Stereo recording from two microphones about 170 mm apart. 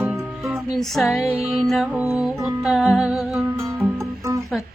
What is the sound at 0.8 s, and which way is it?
Humming, centre (ahead or behind).